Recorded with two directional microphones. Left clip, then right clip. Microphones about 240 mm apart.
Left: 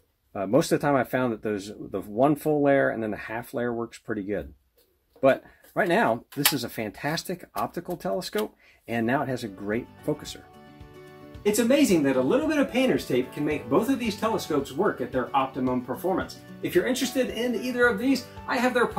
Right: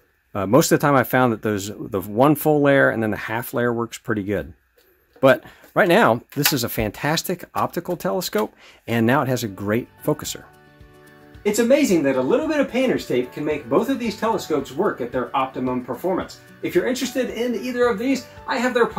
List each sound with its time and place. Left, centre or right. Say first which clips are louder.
0.3 s speech: right 6 dB; right
11.4 s speech: right 5 dB; centre